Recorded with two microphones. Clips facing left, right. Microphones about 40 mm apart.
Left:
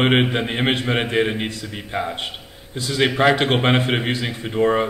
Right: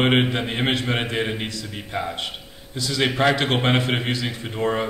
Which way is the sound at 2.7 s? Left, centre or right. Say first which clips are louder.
Left 1 dB; left.